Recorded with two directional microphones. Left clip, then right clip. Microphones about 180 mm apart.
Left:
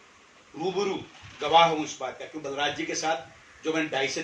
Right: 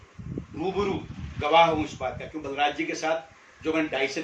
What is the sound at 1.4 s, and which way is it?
Speech, 15° right (ahead or behind).